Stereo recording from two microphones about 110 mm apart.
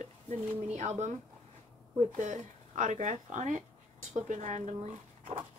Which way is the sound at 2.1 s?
90° right.